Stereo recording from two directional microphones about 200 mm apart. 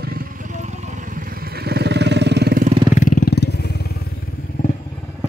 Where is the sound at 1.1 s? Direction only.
50° right (ahead or behind).